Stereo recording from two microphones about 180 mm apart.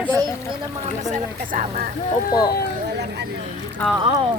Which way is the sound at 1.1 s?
45° right (ahead or behind).